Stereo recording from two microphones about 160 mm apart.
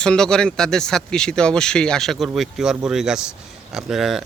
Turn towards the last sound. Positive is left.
turn(degrees=0)  # may be behind; listen again after turning